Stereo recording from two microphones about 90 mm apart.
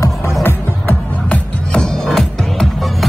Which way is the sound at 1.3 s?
10° left (ahead or behind).